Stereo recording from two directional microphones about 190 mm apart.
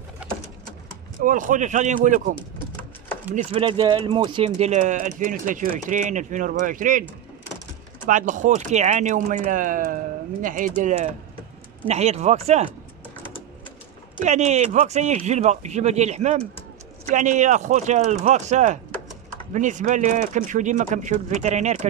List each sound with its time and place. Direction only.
0.2 s pigeon: 5° right (ahead or behind)
1.2 s speech: 45° right (ahead or behind)
3.5 s speech: 25° right (ahead or behind); by 7.1 s 45° right (ahead or behind)
8.1 s speech: 40° right (ahead or behind)
14.2 s speech: 40° right (ahead or behind)